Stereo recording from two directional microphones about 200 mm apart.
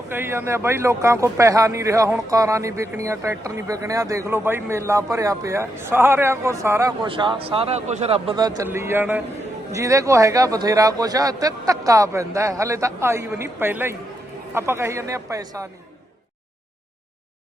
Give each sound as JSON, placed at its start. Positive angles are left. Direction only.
{"t": 0.1, "sound": "a man's voice", "side_deg": -10}